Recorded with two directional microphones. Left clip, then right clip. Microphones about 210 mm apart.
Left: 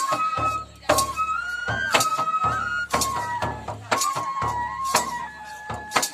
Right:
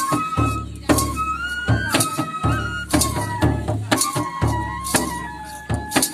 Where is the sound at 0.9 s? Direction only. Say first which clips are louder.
Right 1 dB; 45° right (ahead or behind).